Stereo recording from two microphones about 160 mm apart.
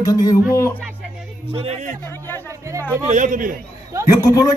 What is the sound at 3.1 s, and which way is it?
Speech, 55° right (ahead or behind).